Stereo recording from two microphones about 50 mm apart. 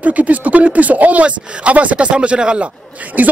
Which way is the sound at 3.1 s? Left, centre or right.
Right.